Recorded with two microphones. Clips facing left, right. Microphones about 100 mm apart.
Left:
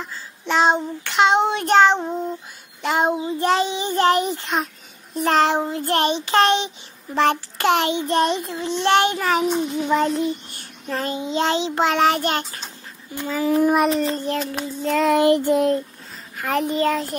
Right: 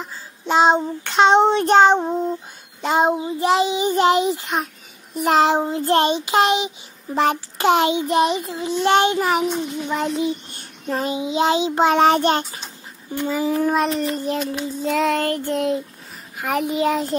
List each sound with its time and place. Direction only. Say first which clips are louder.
0.5 s child singing: right 2 dB; 15° right (ahead or behind)
3.3 s child singing: right 2 dB; 5° right (ahead or behind)
8.1 s child singing: right 1 dB; 5° right (ahead or behind)
9.8 s child singing: left 4 dB; centre (ahead or behind)
10.2 s child singing: right 1 dB; 20° right (ahead or behind)
13.5 s a child's voice: left 4 dB; 10° left (ahead or behind)
14.1 s child singing: right 1 dB; 15° right (ahead or behind)
14.9 s child singing: left 1 dB; centre (ahead or behind)
15.1 s a child's voice: left 6 dB; 15° left (ahead or behind)
15.5 s child singing: left 3 dB; centre (ahead or behind)
16.3 s a child's voice: even; 15° right (ahead or behind)
16.6 s child singing: right 2 dB; 10° right (ahead or behind)